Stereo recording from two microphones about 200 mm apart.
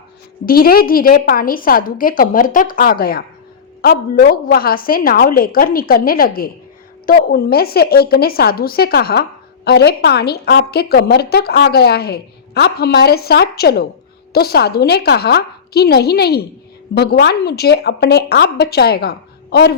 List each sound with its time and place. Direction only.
0.4 s a woman's voice: 45° left (ahead or behind)